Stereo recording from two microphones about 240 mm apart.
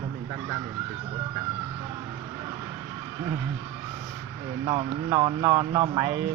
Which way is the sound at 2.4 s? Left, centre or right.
Centre.